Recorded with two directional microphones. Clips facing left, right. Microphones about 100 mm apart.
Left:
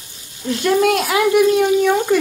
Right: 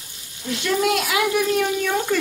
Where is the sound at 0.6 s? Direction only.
45° left (ahead or behind).